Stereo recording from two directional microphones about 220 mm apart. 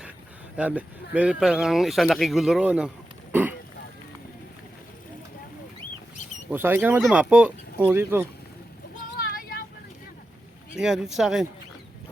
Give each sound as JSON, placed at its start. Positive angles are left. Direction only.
{"t": 0.5, "sound": "speech", "side_deg": -5}
{"t": 6.5, "sound": "speech", "side_deg": -10}
{"t": 9.1, "sound": "vehicle", "side_deg": 40}
{"t": 10.8, "sound": "speech", "side_deg": 0}